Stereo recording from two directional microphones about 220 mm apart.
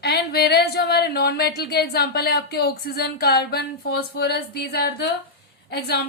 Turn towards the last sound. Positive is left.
turn(degrees=45)  # may be behind; listen again after turning